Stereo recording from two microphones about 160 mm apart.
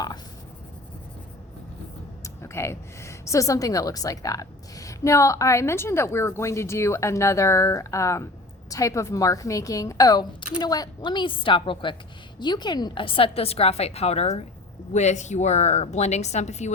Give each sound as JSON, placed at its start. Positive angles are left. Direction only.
{"t": 2.2, "sound": "a woman's voice", "side_deg": 15}